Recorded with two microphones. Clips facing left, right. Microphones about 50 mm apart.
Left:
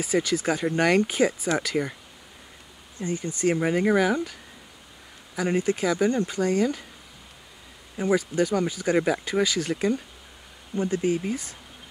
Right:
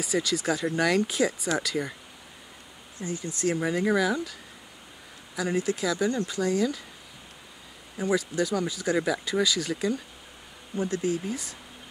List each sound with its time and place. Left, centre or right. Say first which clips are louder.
0.0 s speech: left 3 dB; left
3.0 s speech: left 4 dB; left
8.0 s speech: left 3 dB; left